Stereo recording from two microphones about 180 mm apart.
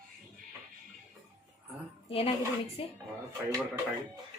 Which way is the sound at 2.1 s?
30° left (ahead or behind).